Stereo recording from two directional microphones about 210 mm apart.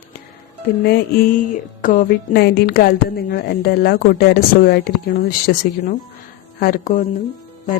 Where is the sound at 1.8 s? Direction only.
45° left (ahead or behind).